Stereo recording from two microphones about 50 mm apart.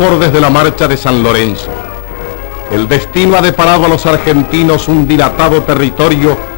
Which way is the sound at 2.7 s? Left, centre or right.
Centre.